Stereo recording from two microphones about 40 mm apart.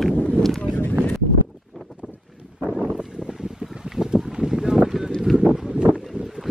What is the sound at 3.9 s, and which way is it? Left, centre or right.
Boat, centre.